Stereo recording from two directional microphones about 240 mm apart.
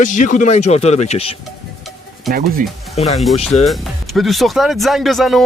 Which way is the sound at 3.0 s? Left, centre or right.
Left.